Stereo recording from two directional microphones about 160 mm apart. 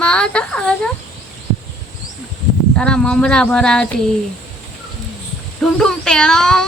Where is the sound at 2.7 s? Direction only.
5° left (ahead or behind).